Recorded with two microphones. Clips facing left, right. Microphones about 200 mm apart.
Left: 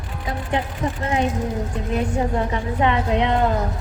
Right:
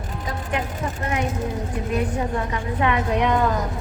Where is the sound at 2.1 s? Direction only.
25° left (ahead or behind).